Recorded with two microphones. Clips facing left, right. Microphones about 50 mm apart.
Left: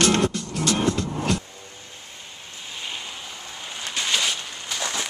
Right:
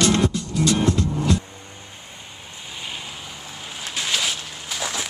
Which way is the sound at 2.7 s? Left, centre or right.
Centre.